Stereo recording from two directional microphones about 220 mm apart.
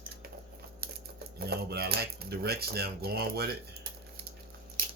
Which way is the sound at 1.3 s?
45° right (ahead or behind).